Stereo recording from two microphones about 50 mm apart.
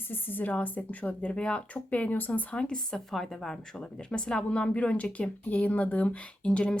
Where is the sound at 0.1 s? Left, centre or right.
Left.